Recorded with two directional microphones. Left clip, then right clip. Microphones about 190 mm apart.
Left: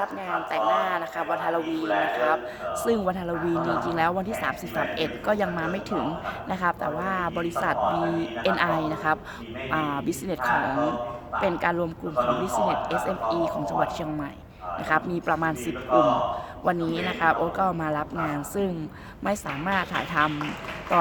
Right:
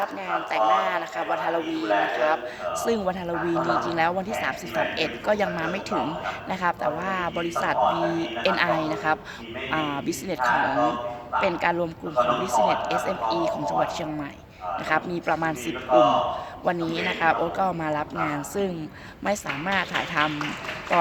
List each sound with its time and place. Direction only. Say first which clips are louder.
0.3 s speech: right 3 dB; centre (ahead or behind)